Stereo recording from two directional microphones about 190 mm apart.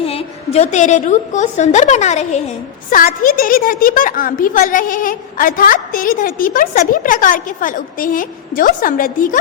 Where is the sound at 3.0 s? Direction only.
45° left (ahead or behind).